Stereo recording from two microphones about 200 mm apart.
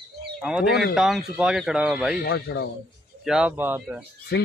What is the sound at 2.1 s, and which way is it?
Speech, 55° left (ahead or behind).